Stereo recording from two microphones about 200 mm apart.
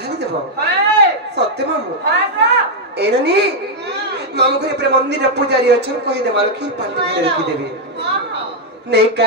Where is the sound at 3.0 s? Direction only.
55° right (ahead or behind).